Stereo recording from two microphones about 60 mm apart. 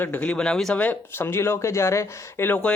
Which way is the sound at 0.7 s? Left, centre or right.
Left.